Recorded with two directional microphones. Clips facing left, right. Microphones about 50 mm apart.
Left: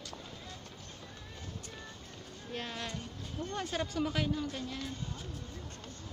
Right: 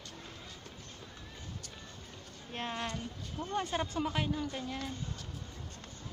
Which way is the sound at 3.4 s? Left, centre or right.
Centre.